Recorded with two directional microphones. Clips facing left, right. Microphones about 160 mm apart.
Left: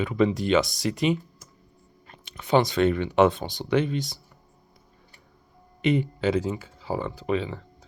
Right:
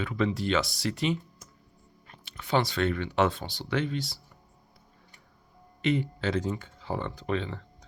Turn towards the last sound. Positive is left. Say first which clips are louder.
# left 4 dB
turn(degrees=5)  # may be behind; listen again after turning